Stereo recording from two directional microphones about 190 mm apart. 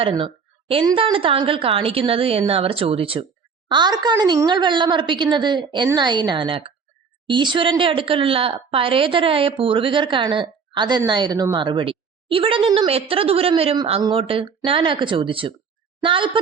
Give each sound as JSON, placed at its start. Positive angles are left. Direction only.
{"t": 0.0, "sound": "a woman's voice", "side_deg": -30}